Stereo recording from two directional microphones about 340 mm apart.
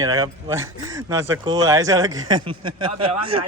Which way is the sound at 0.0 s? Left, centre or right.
Centre.